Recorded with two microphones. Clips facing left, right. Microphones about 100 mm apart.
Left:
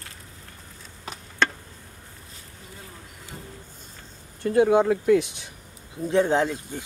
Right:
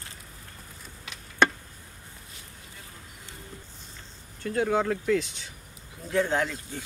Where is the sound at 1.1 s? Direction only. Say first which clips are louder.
Left 8 dB; 40° left (ahead or behind).